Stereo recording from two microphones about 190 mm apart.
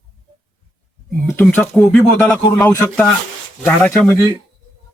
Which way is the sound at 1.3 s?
10° left (ahead or behind).